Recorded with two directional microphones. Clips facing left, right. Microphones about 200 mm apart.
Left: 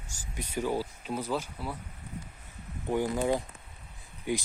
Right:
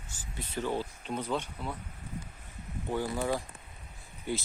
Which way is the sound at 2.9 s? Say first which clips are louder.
Left 4 dB; 15° left (ahead or behind).